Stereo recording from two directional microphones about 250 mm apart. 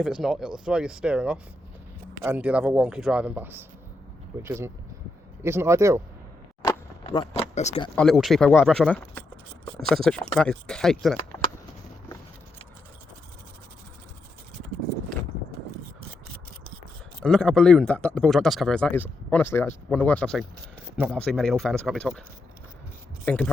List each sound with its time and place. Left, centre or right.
0.0 s speech: centre
6.6 s a sound: centre
7.9 s speech: centre
17.2 s speech: centre
23.2 s speech: centre